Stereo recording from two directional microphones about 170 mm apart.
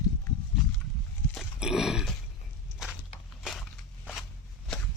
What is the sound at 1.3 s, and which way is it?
Grunt, centre (ahead or behind).